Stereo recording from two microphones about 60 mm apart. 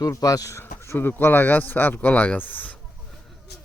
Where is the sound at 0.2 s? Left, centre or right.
Left.